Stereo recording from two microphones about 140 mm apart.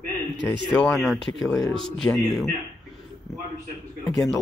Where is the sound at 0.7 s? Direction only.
Centre (ahead or behind).